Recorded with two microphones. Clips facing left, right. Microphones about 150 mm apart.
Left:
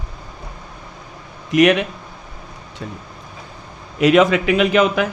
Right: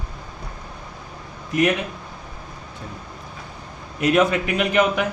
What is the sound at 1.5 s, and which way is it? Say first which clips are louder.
Speech: left 6 dB; 80° left.